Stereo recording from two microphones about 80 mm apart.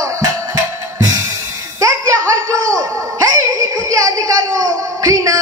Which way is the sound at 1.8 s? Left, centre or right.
Right.